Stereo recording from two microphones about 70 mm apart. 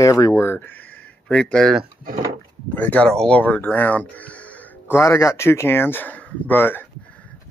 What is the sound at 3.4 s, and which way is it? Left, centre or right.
Speech, left.